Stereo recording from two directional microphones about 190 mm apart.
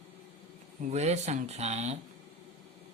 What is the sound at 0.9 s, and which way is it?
Speech, 35° right (ahead or behind).